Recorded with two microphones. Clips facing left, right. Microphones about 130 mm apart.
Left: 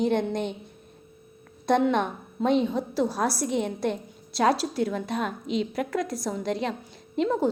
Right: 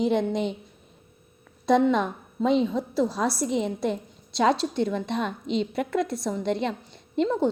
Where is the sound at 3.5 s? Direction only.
55° left (ahead or behind).